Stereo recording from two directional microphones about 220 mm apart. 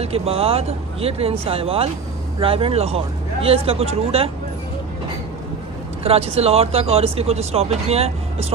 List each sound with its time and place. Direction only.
0.0 s speech: 25° right (ahead or behind)
6.0 s speech: 25° right (ahead or behind)